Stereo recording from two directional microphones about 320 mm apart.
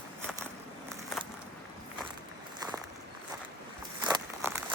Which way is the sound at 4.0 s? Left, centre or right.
Centre.